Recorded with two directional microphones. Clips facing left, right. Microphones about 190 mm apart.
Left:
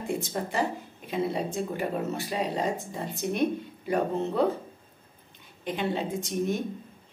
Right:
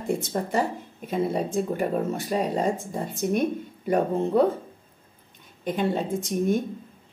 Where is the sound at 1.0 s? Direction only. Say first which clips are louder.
Right 3 dB; 45° right (ahead or behind).